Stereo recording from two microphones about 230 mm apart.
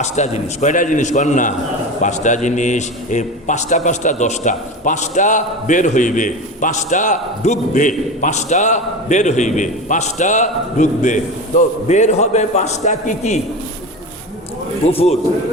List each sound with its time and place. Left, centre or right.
0.0 s a man's voice: left
14.8 s a man's voice: left